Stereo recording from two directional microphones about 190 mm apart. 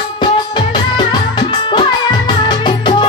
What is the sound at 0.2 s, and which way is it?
Music, 25° left (ahead or behind).